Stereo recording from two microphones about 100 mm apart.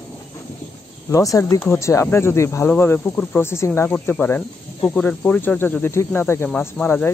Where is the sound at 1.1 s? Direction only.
35° left (ahead or behind).